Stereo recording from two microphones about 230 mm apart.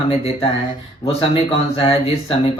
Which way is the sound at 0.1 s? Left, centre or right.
Left.